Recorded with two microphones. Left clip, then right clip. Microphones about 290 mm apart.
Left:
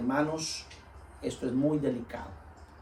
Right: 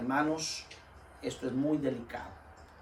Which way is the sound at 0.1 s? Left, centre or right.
Centre.